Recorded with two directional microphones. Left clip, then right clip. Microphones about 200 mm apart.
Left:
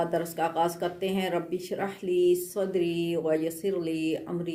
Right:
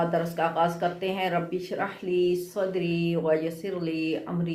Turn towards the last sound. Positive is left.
turn(degrees=45)  # may be behind; listen again after turning